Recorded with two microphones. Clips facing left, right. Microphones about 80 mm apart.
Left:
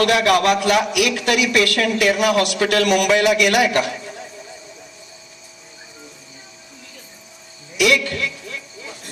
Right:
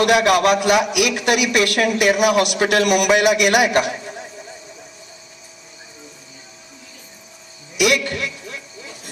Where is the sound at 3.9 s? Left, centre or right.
Right.